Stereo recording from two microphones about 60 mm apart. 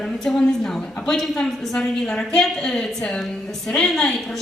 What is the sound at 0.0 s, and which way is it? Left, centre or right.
A woman's voice, centre.